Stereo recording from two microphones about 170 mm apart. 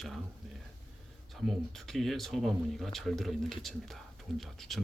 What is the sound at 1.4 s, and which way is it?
Speech, centre (ahead or behind).